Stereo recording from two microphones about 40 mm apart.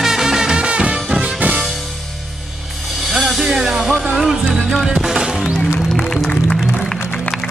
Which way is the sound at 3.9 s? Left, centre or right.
Right.